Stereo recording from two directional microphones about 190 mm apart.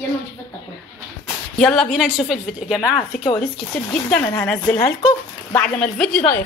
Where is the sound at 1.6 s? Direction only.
Centre (ahead or behind).